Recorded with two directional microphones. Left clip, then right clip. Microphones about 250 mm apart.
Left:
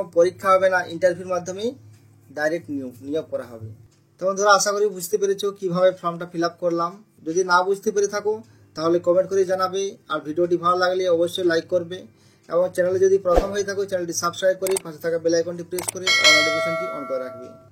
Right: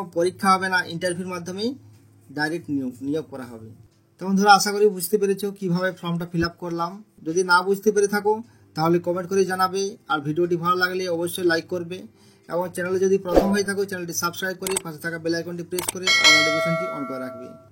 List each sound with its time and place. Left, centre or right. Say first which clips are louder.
0.1 s speech: left 3 dB; right
15.8 s speech: even; centre